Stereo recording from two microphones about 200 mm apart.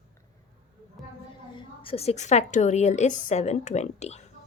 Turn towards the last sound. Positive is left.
turn(degrees=35)  # may be behind; listen again after turning